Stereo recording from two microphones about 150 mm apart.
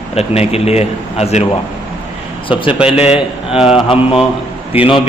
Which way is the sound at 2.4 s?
35° left (ahead or behind).